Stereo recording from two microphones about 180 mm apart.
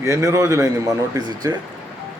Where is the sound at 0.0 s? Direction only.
15° right (ahead or behind).